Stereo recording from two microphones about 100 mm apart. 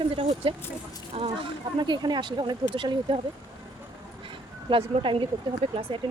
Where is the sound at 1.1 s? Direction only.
70° right (ahead or behind); by 3.2 s 50° right (ahead or behind).